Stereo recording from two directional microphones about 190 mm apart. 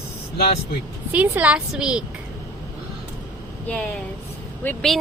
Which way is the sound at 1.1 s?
10° right (ahead or behind).